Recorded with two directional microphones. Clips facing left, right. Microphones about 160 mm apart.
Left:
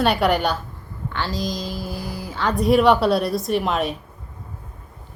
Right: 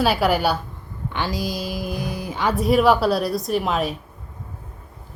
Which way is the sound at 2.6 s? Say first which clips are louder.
Left 1 dB; centre (ahead or behind).